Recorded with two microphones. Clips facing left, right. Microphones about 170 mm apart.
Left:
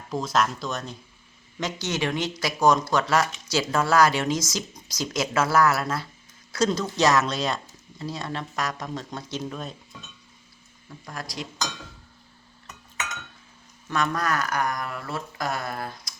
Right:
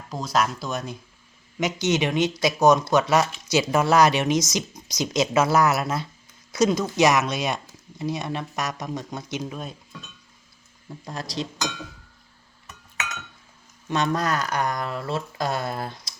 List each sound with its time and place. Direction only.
0.1 s speech: 5° right (ahead or behind)
10.8 s speech: 25° right (ahead or behind)
13.9 s speech: 25° right (ahead or behind)